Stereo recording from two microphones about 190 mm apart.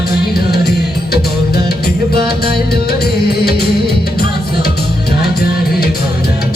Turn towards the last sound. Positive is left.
turn(degrees=55)  # may be behind; listen again after turning